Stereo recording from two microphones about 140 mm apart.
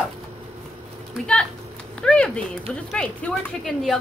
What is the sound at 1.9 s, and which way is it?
Speech, 5° left (ahead or behind).